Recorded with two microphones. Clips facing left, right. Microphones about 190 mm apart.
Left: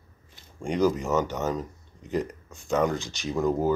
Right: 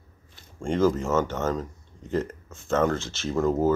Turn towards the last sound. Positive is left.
turn(degrees=0)  # may be behind; listen again after turning